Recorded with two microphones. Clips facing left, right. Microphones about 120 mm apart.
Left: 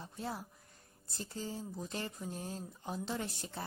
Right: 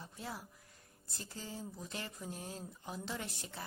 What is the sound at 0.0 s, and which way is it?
A woman's voice, 30° left (ahead or behind).